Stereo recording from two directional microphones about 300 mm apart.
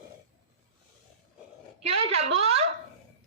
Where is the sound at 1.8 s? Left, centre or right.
Right.